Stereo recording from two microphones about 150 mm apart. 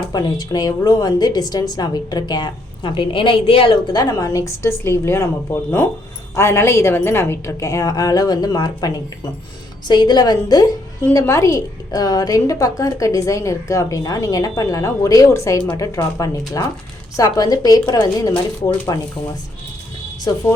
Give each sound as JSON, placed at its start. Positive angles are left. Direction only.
{"t": 0.1, "sound": "a woman's voice", "side_deg": 25}
{"t": 20.3, "sound": "a woman's voice", "side_deg": 25}